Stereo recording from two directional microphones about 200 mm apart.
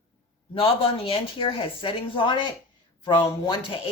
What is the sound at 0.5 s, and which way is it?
Speech, 30° left (ahead or behind).